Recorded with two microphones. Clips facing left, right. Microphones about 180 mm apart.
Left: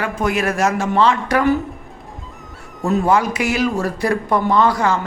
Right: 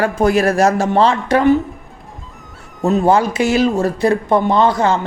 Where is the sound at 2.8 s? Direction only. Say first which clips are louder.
Right 3 dB; 25° right (ahead or behind).